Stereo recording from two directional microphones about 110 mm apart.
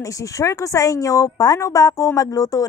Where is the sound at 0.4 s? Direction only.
30° left (ahead or behind).